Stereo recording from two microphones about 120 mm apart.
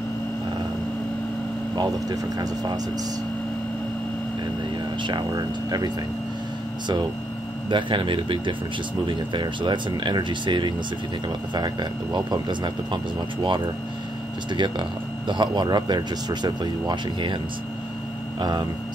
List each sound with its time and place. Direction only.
1.8 s speech: 30° right (ahead or behind)
5.0 s speech: 40° right (ahead or behind)
7.7 s speech: 45° right (ahead or behind)
18.4 s speech: 35° right (ahead or behind)